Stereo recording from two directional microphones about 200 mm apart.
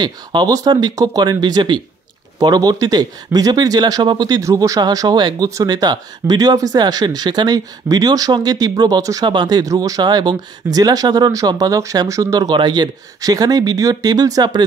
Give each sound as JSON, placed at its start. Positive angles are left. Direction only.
{"t": 0.0, "sound": "speech", "side_deg": -20}